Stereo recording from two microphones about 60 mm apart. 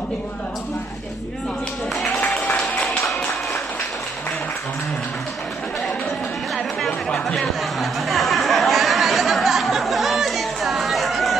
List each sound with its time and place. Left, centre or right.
2.1 s music: left
6.9 s chatter: centre
7.8 s a sound: centre